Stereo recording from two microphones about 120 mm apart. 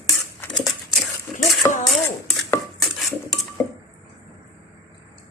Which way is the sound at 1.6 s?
25° left (ahead or behind).